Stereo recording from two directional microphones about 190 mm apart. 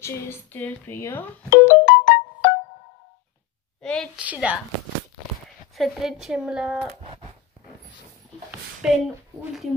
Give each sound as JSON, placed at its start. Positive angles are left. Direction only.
{"t": 0.0, "sound": "a woman's voice", "side_deg": 10}
{"t": 1.5, "sound": "keyboard", "side_deg": 50}
{"t": 3.8, "sound": "a woman's voice", "side_deg": 5}
{"t": 4.2, "sound": "speech", "side_deg": -5}
{"t": 5.8, "sound": "speech", "side_deg": 0}
{"t": 8.5, "sound": "a sound", "side_deg": -5}